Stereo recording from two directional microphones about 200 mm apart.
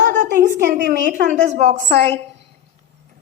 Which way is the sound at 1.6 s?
35° right (ahead or behind).